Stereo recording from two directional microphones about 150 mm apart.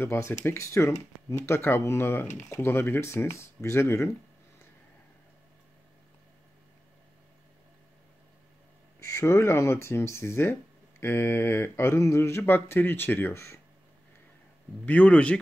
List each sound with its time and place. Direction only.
0.0 s speech: 15° left (ahead or behind)
9.0 s speech: 20° left (ahead or behind)
14.9 s speech: 10° left (ahead or behind)